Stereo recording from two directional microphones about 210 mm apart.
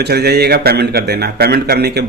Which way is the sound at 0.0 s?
50° right (ahead or behind).